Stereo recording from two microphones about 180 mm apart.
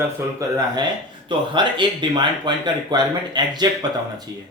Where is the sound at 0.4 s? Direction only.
15° right (ahead or behind).